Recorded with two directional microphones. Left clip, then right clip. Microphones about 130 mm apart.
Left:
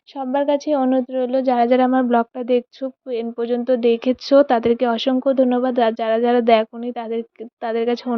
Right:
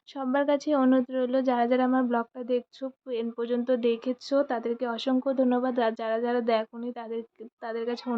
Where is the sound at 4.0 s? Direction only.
60° left (ahead or behind).